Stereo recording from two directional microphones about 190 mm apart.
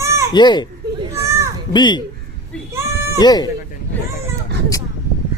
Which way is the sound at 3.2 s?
20° left (ahead or behind).